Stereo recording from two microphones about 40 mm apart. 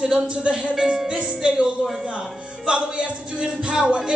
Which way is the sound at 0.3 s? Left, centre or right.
Right.